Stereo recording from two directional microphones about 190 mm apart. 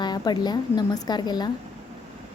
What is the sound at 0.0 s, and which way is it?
A woman's voice, 20° left (ahead or behind).